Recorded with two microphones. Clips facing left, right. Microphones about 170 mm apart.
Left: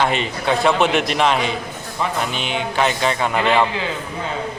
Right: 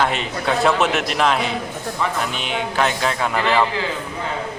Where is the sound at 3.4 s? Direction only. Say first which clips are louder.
Left 1 dB; 20° left (ahead or behind).